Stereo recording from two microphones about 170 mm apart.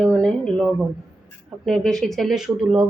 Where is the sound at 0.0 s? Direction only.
5° left (ahead or behind).